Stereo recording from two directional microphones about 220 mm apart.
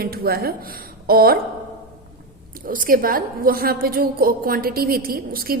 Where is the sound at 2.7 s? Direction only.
40° right (ahead or behind).